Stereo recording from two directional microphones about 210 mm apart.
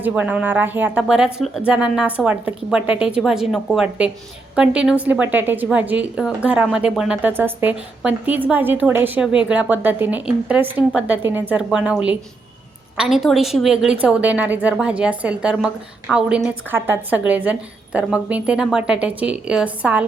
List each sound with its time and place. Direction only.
0.0 s a woman's voice: 5° right (ahead or behind)